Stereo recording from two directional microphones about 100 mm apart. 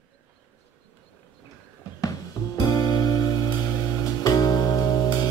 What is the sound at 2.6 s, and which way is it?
Music, 40° left (ahead or behind).